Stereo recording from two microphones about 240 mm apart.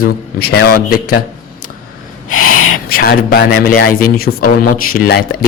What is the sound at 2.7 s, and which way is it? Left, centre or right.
A man's voice, left.